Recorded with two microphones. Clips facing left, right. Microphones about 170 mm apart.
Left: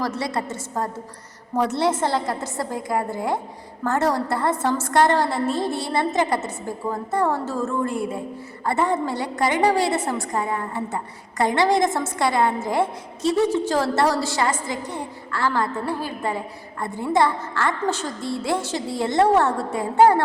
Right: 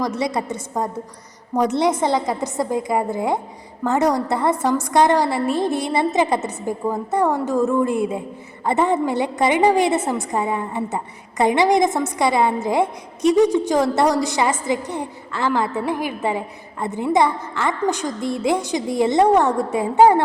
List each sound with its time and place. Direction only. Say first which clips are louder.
0.0 s a woman's voice: right 3 dB; 15° right (ahead or behind)